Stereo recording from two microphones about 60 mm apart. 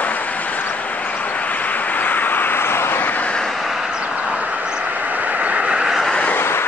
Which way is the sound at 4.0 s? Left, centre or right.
Centre.